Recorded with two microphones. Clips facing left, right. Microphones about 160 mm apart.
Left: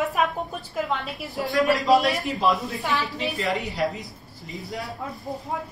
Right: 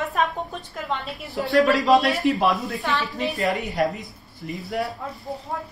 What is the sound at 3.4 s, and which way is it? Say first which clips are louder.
Speech: right 4 dB; 45° right (ahead or behind).